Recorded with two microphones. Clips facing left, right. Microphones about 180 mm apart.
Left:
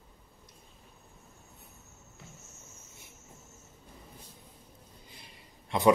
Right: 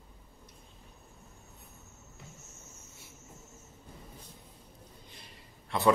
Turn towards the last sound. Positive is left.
turn(degrees=15)  # may be behind; listen again after turning